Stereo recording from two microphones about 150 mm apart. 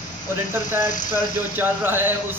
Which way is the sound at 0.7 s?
60° left (ahead or behind).